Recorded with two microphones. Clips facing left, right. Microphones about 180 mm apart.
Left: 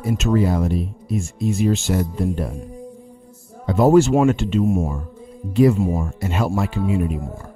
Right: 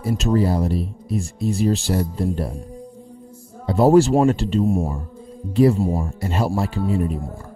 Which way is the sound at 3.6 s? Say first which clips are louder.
Even; 35° right (ahead or behind).